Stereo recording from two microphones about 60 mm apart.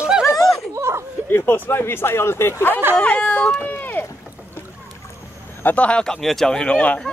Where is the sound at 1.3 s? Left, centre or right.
Left.